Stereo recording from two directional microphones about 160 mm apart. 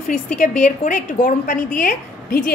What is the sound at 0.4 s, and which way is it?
A woman's voice, 50° left (ahead or behind).